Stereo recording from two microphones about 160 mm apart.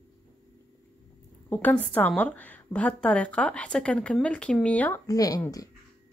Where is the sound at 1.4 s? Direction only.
10° left (ahead or behind).